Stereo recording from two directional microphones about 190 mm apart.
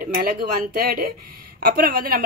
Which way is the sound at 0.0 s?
50° right (ahead or behind).